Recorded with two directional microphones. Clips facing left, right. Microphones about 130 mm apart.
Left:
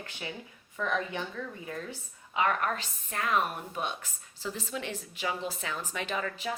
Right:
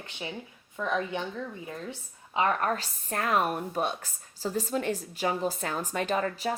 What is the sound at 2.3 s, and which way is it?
A woman's voice, 35° right (ahead or behind).